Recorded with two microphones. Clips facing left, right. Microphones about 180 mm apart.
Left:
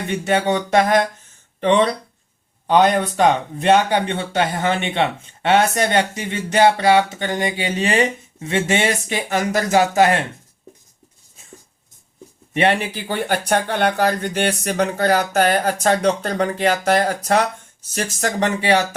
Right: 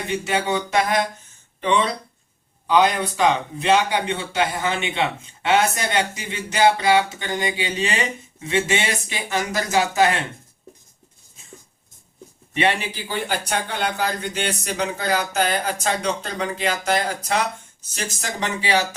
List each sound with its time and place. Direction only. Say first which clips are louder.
0.7 s speech: left 6 dB; 45° left (ahead or behind)
12.5 s speech: left 4 dB; 50° left (ahead or behind)